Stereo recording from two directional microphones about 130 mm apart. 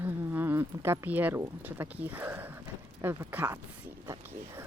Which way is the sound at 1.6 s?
15° right (ahead or behind).